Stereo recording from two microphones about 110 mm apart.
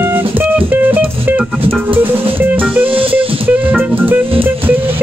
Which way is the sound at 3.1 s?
15° right (ahead or behind).